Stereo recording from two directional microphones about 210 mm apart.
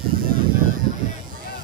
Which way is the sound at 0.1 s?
45° right (ahead or behind).